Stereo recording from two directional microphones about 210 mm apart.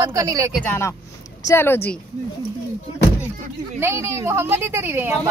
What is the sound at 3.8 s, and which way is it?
A woman's voice, 10° right (ahead or behind).